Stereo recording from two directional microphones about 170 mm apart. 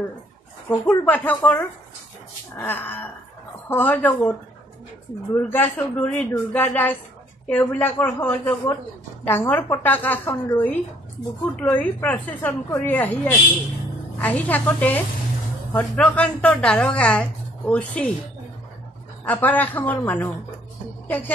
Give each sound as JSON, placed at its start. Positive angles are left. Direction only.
{"t": 0.7, "sound": "a woman's voice", "side_deg": 10}
{"t": 5.5, "sound": "a woman's voice", "side_deg": 10}
{"t": 19.2, "sound": "a woman's voice", "side_deg": 10}